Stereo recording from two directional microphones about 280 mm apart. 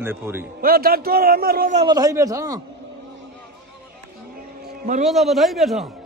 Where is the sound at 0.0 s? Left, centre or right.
Centre.